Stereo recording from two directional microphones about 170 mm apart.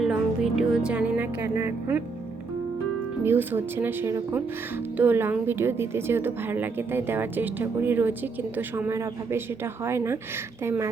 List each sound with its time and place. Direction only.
0.0 s music: centre (ahead or behind)
3.2 s a woman's voice: 10° right (ahead or behind)